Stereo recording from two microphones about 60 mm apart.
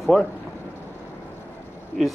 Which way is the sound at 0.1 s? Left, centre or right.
Centre.